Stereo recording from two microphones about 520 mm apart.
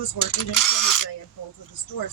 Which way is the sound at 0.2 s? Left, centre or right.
Left.